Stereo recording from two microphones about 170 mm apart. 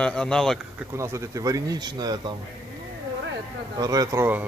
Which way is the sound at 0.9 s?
15° right (ahead or behind).